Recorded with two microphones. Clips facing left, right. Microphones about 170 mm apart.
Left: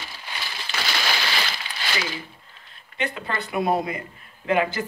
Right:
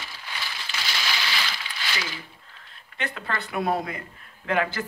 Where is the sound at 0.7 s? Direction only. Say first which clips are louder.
Left 5 dB; 65° left (ahead or behind).